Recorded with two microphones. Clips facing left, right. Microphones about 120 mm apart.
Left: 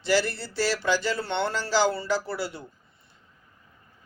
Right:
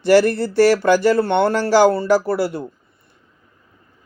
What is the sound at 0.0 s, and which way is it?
Speech, 55° right (ahead or behind).